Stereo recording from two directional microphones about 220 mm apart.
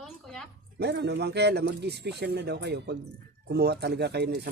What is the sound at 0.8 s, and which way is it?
Speech, 50° right (ahead or behind).